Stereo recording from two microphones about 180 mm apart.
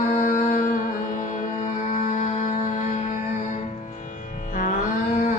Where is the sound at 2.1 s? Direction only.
40° left (ahead or behind).